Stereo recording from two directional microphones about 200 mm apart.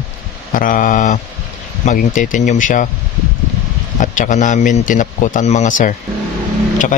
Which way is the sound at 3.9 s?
40° left (ahead or behind).